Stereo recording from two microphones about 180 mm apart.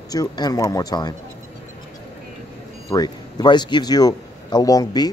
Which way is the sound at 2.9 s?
20° left (ahead or behind).